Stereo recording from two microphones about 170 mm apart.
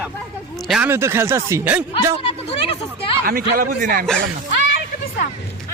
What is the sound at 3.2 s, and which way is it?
Speech, 60° right (ahead or behind).